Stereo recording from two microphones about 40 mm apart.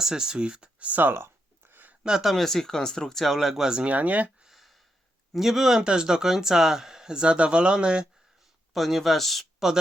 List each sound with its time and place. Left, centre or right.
0.0 s speech: centre
0.8 s speech: right
1.0 s a sound: right
2.0 s speech: centre
2.3 s speech: centre
3.6 s speech: centre
3.8 s speech: right
4.4 s a sound: centre
5.3 s speech: centre
5.8 s speech: right
8.7 s speech: centre